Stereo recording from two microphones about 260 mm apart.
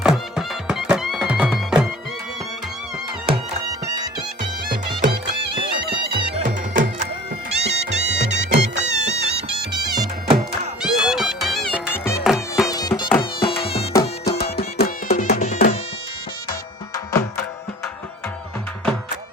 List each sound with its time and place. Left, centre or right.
0.0 s music: centre
6.1 s music: right
9.7 s music: centre
10.8 s music: centre
12.7 s music: centre
14.3 s music: left
16.9 s music: centre